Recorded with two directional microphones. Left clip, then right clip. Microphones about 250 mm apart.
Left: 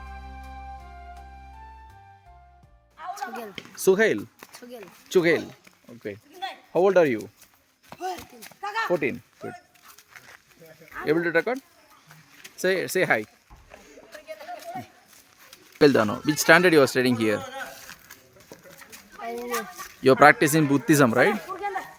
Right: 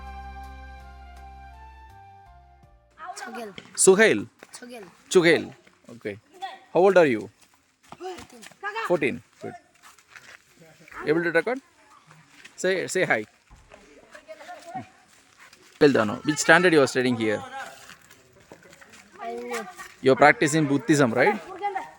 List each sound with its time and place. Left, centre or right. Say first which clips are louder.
3.2 s a woman's voice: left 1 dB; right
8.1 s speech: left 3 dB; centre
8.6 s a sound: left 2 dB; left
8.9 s speech: right 3 dB; centre
10.1 s dog: right 1 dB; centre
10.8 s speech: even; centre
14.3 s a sound: left 4 dB; left
15.8 s speech: left 1 dB; centre
18.4 s pigeon: left 2 dB; left
19.2 s a sound: even; centre
19.5 s speech: left 2 dB; centre